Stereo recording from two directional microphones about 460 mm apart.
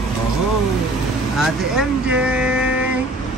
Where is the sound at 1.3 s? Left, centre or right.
Centre.